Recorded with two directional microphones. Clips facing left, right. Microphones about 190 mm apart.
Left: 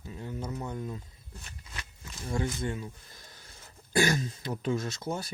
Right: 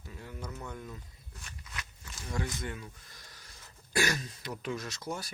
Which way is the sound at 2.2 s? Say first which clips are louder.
Left 5 dB; 30° left (ahead or behind).